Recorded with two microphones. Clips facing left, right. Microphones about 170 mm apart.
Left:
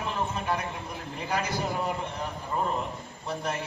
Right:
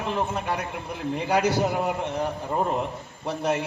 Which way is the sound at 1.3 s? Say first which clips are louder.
Right 7 dB; 70° right (ahead or behind).